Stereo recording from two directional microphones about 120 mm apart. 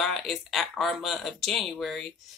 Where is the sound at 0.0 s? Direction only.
Centre (ahead or behind).